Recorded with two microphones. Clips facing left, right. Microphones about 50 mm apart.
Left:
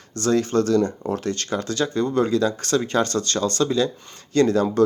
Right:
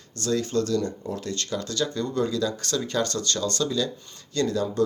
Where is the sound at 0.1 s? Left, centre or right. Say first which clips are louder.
Left 5 dB; left.